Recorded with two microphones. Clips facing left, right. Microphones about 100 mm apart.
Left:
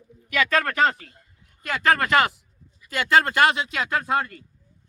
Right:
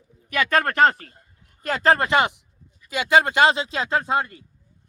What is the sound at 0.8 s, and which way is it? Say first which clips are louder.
A man's voice: right 4 dB; 45° right (ahead or behind).